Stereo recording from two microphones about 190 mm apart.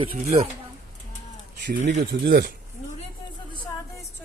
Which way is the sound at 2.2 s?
55° right (ahead or behind).